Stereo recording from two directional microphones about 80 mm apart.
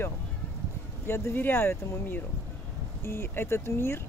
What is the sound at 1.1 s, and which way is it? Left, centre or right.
Speech, left.